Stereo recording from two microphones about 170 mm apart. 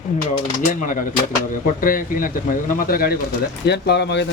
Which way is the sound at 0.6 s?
50° left (ahead or behind).